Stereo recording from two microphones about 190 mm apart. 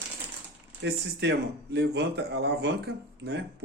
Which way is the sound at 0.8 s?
65° right (ahead or behind).